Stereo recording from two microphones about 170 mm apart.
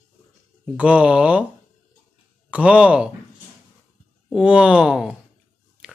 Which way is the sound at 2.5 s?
5° right (ahead or behind).